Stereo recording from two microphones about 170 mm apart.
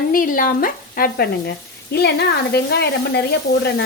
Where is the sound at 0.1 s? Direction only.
55° left (ahead or behind).